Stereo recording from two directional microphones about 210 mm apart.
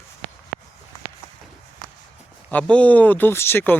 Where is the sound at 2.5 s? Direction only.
5° left (ahead or behind).